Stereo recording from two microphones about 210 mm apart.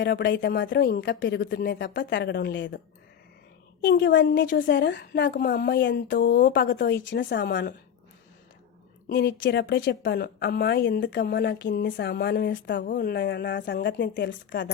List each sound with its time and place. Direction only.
0.0 s a woman's voice: 55° left (ahead or behind)
9.0 s a woman's voice: 55° left (ahead or behind)
12.8 s a woman's voice: 45° left (ahead or behind)